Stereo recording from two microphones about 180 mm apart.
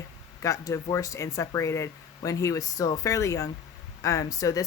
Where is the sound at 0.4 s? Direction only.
15° left (ahead or behind).